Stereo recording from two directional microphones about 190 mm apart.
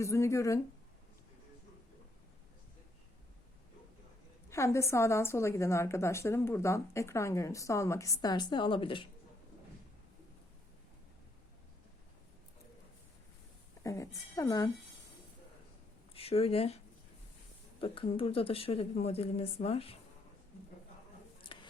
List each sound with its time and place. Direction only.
0.0 s a woman's voice: 15° left (ahead or behind)
4.4 s a woman's voice: 15° left (ahead or behind)
13.8 s a woman's voice: 15° left (ahead or behind)
16.1 s a woman's voice: 30° left (ahead or behind)
21.4 s a sound: 25° left (ahead or behind)